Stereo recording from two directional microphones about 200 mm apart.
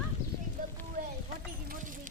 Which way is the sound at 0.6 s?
45° right (ahead or behind).